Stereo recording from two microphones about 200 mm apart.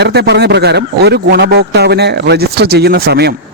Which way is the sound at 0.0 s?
55° right (ahead or behind).